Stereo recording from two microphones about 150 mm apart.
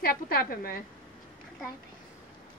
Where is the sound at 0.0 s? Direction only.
85° left.